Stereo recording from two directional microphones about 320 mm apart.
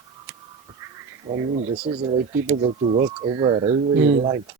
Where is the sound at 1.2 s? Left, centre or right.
Centre.